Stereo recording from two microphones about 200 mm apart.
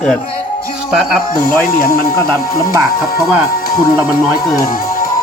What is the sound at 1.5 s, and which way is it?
Speech, 45° left (ahead or behind).